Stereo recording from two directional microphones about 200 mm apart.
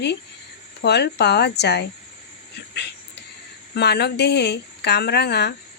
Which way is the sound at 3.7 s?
55° left (ahead or behind).